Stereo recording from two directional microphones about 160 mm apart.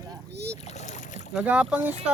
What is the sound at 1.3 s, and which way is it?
Speech, 5° right (ahead or behind).